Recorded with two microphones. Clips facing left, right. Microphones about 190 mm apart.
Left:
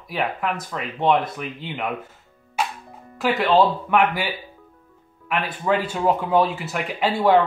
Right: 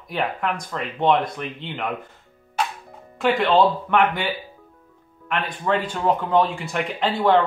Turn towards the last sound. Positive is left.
turn(degrees=10)  # may be behind; listen again after turning